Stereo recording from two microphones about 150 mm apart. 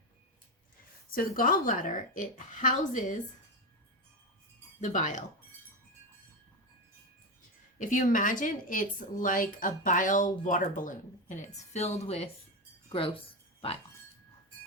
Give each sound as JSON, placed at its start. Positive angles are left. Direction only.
{"t": 1.4, "sound": "speech", "side_deg": 65}
{"t": 4.8, "sound": "speech", "side_deg": 55}
{"t": 7.8, "sound": "speech", "side_deg": 60}